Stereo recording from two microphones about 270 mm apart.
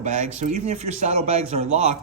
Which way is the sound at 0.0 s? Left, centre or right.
Right.